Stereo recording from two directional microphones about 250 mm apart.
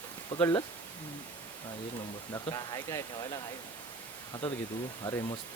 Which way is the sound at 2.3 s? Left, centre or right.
Centre.